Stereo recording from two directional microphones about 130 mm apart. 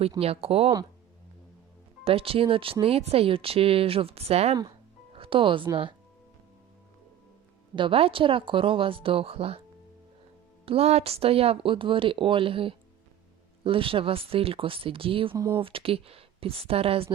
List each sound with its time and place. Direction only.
0.2 s speech: 50° right (ahead or behind)
2.0 s speech: 45° right (ahead or behind)
7.8 s speech: 45° right (ahead or behind)
10.7 s speech: 50° right (ahead or behind)
15.4 s speech: 20° right (ahead or behind)
15.6 s speech: 45° right (ahead or behind)